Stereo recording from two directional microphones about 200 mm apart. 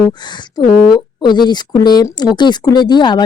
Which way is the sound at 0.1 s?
20° left (ahead or behind).